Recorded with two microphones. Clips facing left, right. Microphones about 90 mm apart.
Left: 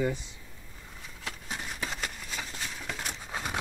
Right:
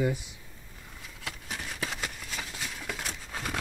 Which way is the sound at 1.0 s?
Centre (ahead or behind).